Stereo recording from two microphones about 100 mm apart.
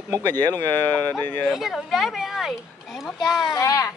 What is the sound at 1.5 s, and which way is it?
Speech, centre (ahead or behind).